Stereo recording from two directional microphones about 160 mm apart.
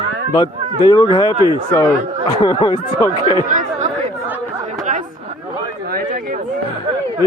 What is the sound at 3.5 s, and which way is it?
Speech, 50° right (ahead or behind).